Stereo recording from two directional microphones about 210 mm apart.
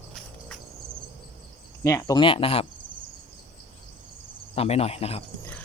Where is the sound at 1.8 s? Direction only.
15° left (ahead or behind).